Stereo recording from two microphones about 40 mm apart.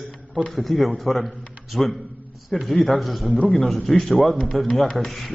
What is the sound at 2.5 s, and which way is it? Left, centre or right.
A man's voice, centre.